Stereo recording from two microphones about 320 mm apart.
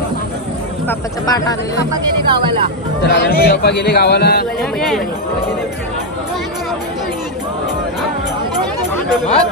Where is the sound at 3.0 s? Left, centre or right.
Left.